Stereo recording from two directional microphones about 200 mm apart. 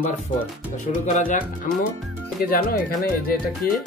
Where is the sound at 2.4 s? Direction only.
45° left (ahead or behind).